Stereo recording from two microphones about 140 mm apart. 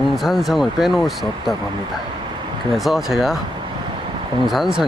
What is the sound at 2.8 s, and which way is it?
Speech, centre (ahead or behind).